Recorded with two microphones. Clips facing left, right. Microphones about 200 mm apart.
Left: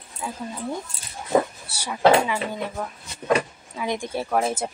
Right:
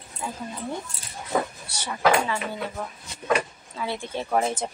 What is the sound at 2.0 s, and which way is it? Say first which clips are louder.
Speech: left 4 dB; 25° left (ahead or behind).